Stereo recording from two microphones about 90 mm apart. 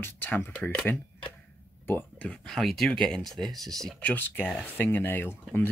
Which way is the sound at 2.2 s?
10° left (ahead or behind).